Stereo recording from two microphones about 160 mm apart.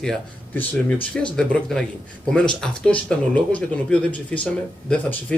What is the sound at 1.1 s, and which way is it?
Speech, 5° left (ahead or behind).